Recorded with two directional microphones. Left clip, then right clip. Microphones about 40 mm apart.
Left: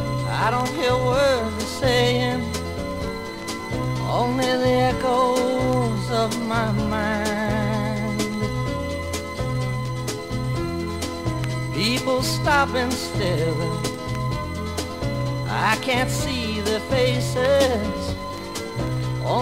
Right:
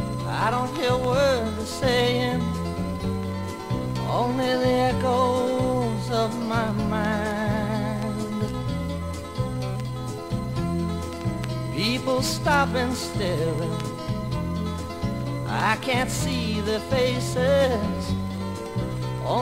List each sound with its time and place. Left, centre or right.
0.4 s music: centre
4.1 s music: left
11.8 s music: centre
15.5 s music: centre